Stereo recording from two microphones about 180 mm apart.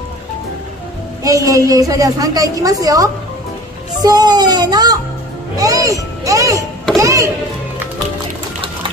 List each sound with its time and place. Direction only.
1.2 s a woman's voice: 20° right (ahead or behind)